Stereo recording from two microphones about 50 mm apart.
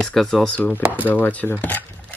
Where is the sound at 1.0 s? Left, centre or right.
Left.